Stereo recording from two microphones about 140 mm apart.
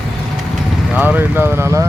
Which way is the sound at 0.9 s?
10° right (ahead or behind).